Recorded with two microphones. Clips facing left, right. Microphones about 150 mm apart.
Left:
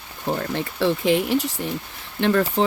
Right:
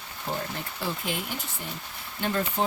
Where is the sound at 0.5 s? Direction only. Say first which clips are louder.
Left 11 dB; 90° left.